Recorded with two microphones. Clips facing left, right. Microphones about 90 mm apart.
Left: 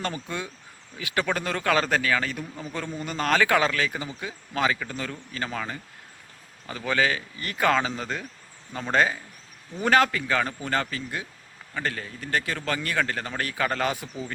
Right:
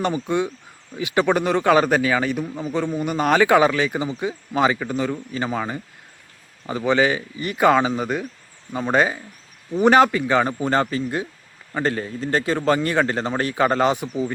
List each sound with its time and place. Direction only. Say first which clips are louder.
0.0 s speech: right 10 dB; 20° right (ahead or behind)